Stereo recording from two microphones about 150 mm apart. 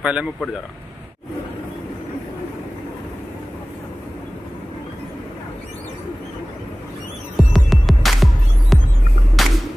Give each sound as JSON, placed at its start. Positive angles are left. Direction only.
{"t": 0.0, "sound": "speech", "side_deg": -5}
{"t": 7.3, "sound": "music", "side_deg": 0}